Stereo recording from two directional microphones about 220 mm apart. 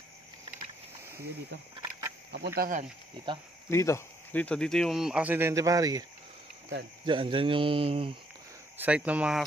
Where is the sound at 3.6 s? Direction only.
10° left (ahead or behind); by 6.0 s 15° right (ahead or behind).